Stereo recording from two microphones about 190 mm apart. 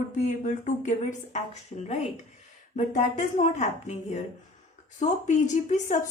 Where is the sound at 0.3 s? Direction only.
40° left (ahead or behind).